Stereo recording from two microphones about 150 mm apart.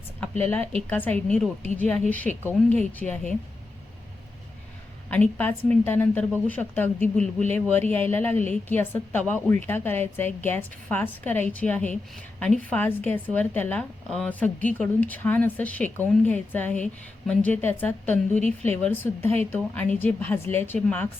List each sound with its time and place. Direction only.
0.7 s a woman's voice: 10° left (ahead or behind)
3.0 s speech: 5° left (ahead or behind)
5.1 s a woman's voice: 10° left (ahead or behind)
18.4 s speech: 45° right (ahead or behind)
18.8 s a woman's voice: 15° left (ahead or behind)